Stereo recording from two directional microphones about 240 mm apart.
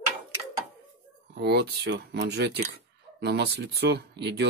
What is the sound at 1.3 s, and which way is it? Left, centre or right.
Speech, right.